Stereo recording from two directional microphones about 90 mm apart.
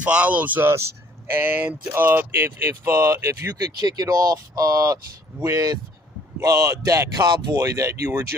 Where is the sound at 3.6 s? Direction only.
45° right (ahead or behind).